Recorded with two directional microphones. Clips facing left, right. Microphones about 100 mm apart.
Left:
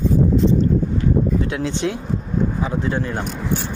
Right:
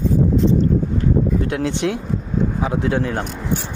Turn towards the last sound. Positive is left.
turn(degrees=-90)